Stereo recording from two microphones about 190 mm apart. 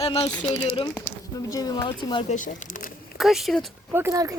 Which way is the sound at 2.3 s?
45° left (ahead or behind).